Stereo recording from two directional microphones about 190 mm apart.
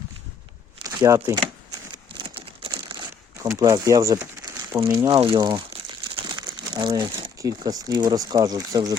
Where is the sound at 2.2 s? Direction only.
30° right (ahead or behind).